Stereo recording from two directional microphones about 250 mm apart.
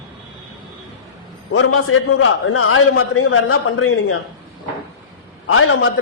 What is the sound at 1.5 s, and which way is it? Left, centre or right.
A man's voice, left.